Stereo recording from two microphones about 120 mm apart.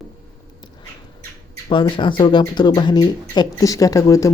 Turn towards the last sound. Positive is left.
turn(degrees=25)  # may be behind; listen again after turning